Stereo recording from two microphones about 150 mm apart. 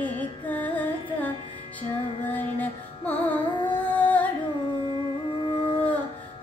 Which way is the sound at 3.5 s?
30° left (ahead or behind).